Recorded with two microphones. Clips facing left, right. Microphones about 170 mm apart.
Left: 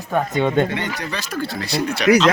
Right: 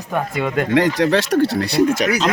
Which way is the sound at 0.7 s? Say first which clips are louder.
Right 11 dB; 90° right.